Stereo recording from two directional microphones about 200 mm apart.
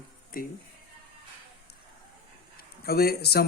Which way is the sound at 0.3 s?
45° left (ahead or behind).